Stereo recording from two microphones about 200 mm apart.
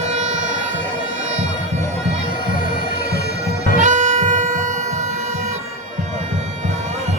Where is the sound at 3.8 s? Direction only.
40° right (ahead or behind).